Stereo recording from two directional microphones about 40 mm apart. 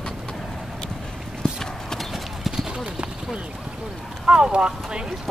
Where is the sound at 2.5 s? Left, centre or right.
Centre.